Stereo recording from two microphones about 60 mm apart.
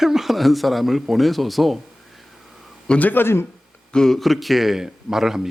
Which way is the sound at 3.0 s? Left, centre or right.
Left.